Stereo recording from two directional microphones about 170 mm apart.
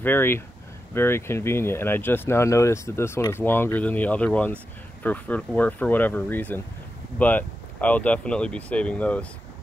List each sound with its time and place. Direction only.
0.0 s speech: 10° left (ahead or behind)